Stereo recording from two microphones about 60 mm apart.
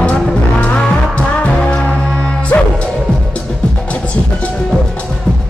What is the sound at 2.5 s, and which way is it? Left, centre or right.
Music, left.